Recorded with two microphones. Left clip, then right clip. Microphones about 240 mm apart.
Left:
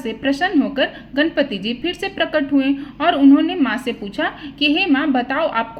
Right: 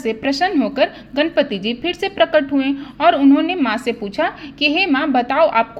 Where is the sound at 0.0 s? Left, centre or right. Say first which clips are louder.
Right 2 dB; right.